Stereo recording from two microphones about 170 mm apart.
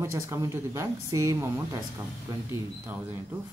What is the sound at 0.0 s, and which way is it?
A woman's voice, 15° right (ahead or behind).